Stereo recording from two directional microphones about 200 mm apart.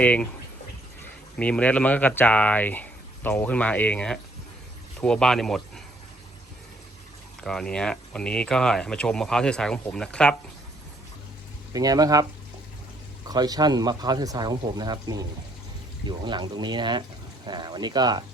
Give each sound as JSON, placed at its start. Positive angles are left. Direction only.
{"t": 0.0, "sound": "speech", "side_deg": 5}
{"t": 1.4, "sound": "speech", "side_deg": 5}
{"t": 7.4, "sound": "speech", "side_deg": 5}
{"t": 11.7, "sound": "speech", "side_deg": -20}
{"t": 13.2, "sound": "speech", "side_deg": -20}